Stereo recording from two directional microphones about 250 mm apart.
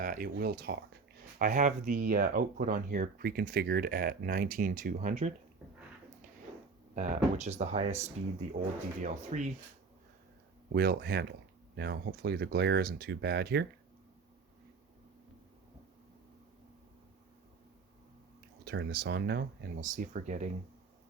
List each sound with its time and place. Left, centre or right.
0.0 s speech: right
6.9 s speech: right
10.7 s speech: right
18.6 s speech: right